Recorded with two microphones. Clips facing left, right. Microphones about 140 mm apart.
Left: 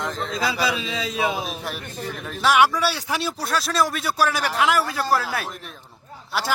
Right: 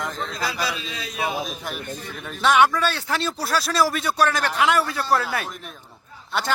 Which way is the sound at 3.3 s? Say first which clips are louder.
Right 1 dB; centre (ahead or behind).